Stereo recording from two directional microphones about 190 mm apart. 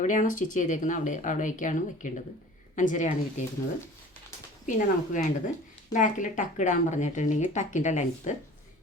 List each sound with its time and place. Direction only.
0.0 s speech: 40° left (ahead or behind)
4.6 s speech: 45° left (ahead or behind)